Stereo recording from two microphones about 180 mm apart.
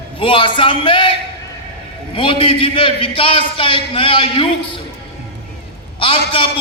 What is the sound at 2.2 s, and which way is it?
A man's voice, 30° left (ahead or behind).